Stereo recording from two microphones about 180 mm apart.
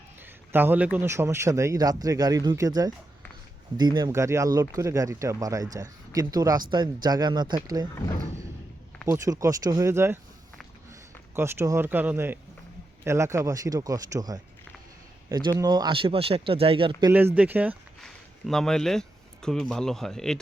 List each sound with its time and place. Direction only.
0.5 s speech: 10° right (ahead or behind)
9.0 s speech: 15° right (ahead or behind)
11.3 s speech: 15° right (ahead or behind); by 17.1 s 30° right (ahead or behind)
17.1 s speech: 10° right (ahead or behind)
18.0 s speech: centre (ahead or behind)